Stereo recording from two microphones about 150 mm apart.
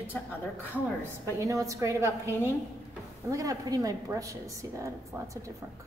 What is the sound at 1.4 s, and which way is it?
A woman's voice, 20° right (ahead or behind).